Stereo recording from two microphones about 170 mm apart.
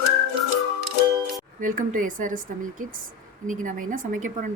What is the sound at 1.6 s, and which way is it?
A woman's voice, 50° right (ahead or behind).